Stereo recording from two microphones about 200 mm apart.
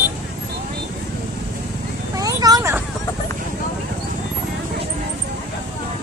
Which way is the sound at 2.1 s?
20° right (ahead or behind).